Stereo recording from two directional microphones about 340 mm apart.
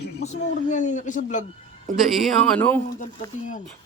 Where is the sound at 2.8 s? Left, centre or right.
Left.